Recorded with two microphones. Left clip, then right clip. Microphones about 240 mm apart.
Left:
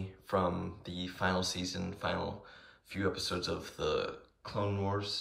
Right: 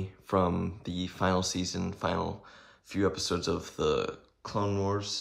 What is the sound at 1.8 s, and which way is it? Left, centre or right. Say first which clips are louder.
Speech: right 4 dB; centre.